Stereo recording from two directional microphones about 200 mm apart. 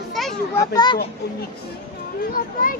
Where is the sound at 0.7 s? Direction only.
20° left (ahead or behind).